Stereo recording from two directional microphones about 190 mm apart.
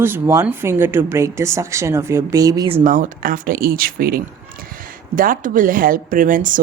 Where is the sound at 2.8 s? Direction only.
45° right (ahead or behind).